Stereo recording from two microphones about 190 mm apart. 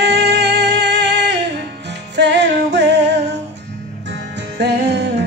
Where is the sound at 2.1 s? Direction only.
65° right (ahead or behind).